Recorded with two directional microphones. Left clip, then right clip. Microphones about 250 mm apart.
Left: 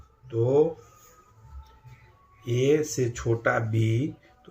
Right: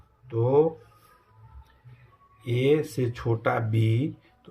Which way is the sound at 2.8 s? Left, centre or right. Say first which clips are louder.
Left 1 dB; right.